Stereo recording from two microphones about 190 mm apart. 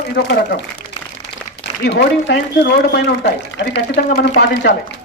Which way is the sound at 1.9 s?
65° left (ahead or behind).